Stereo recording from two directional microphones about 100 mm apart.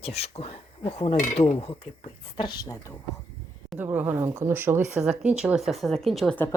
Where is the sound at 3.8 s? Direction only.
20° right (ahead or behind).